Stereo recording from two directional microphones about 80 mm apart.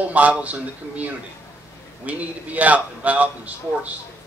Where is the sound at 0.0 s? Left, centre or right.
Centre.